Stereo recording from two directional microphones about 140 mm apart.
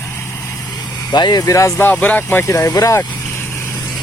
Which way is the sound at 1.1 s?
30° left (ahead or behind).